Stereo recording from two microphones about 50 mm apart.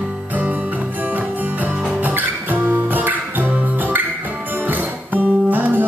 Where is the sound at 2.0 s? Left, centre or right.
Right.